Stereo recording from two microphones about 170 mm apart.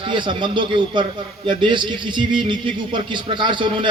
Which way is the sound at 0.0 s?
30° right (ahead or behind).